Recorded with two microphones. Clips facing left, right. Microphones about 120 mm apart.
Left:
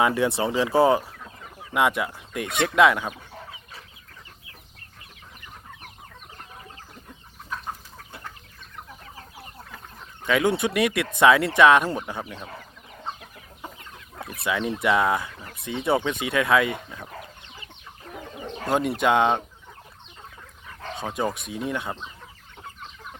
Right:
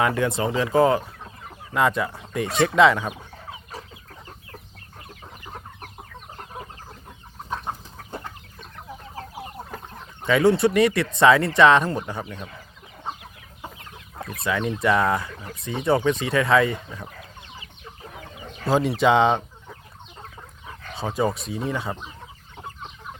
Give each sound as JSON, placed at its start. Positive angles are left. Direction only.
{"t": 0.0, "sound": "speech", "side_deg": 15}
{"t": 7.5, "sound": "chicken", "side_deg": -35}
{"t": 10.4, "sound": "speech", "side_deg": 5}
{"t": 14.3, "sound": "speech", "side_deg": 5}
{"t": 18.7, "sound": "speech", "side_deg": 0}
{"t": 21.0, "sound": "speech", "side_deg": 0}